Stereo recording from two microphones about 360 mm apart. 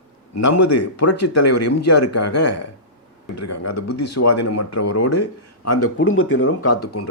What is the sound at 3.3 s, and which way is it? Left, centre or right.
Speech, left.